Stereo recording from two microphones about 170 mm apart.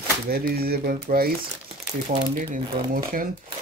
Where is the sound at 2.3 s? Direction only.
55° right (ahead or behind).